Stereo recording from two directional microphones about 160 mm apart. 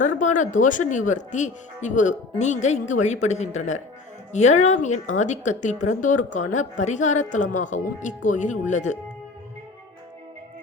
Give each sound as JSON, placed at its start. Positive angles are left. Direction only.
{"t": 0.0, "sound": "a woman's voice", "side_deg": 50}